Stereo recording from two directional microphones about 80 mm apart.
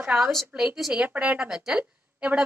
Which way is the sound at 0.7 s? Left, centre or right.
Centre.